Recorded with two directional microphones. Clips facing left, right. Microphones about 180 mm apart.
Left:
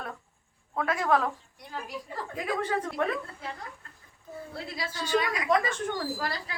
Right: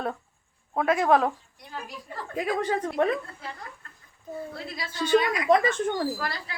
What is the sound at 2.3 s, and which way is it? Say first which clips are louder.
Speech: right 4 dB; 15° right (ahead or behind).